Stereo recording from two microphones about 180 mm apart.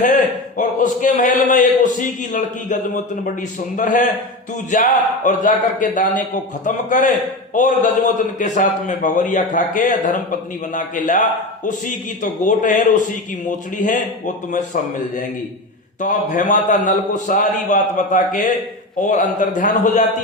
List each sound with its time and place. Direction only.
0.0 s a man's voice: 45° left (ahead or behind)
12.2 s a man's voice: 45° left (ahead or behind)
16.0 s a man's voice: 45° left (ahead or behind)